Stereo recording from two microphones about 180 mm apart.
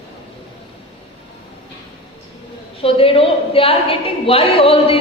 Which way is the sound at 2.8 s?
30° left (ahead or behind).